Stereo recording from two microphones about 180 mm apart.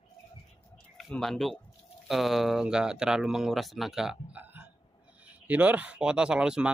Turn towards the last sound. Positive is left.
turn(degrees=-5)  # may be behind; listen again after turning